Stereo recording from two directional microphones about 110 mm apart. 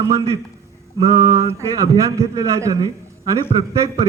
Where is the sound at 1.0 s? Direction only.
30° right (ahead or behind).